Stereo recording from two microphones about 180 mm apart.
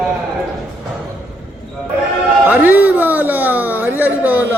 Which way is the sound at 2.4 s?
10° right (ahead or behind).